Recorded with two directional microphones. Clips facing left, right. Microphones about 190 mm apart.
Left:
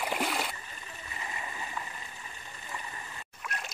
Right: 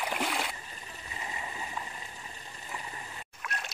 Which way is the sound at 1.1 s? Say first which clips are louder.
Right 1 dB; 20° right (ahead or behind).